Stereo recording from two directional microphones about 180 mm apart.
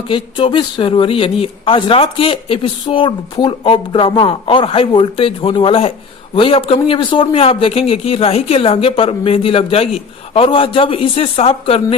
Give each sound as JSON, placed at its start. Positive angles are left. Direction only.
{"t": 0.1, "sound": "a man's voice", "side_deg": 30}